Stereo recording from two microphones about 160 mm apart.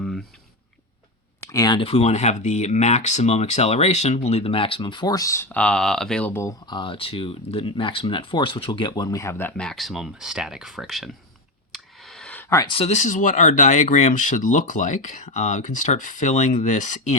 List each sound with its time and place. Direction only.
0.0 s a sound: 5° left (ahead or behind)
1.5 s speech: 25° left (ahead or behind)
1.8 s speech: 40° left (ahead or behind); by 6.5 s 10° left (ahead or behind)
6.7 s speech: 30° left (ahead or behind); by 11.1 s centre (ahead or behind)
11.7 s a sound: centre (ahead or behind)
12.6 s speech: 35° left (ahead or behind)